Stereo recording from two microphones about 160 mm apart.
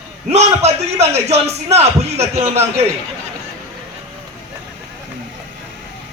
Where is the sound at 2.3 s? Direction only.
20° right (ahead or behind).